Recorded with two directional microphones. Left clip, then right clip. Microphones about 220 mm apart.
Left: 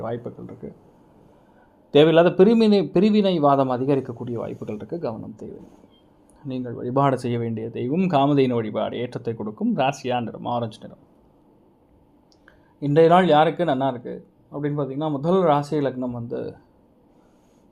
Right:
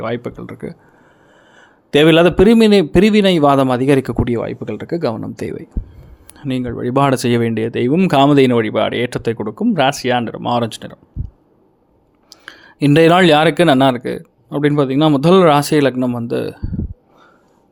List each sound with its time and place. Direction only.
0.0 s speech: 35° right (ahead or behind)
1.9 s a man's voice: 25° right (ahead or behind)
12.5 s speech: 45° right (ahead or behind)